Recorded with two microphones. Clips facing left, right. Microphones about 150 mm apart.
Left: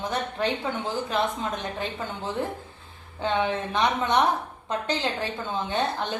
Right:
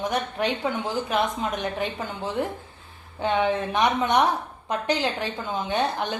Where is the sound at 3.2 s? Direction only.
20° right (ahead or behind).